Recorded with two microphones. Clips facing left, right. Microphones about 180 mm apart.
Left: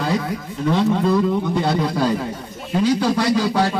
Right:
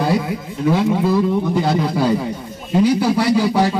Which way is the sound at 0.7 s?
10° right (ahead or behind).